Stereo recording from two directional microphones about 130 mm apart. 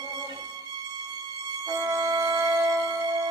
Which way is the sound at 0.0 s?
30° right (ahead or behind).